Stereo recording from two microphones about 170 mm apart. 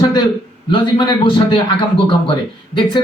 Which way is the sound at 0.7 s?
30° left (ahead or behind).